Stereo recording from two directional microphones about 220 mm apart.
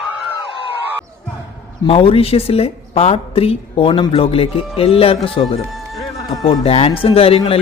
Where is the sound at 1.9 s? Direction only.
25° left (ahead or behind).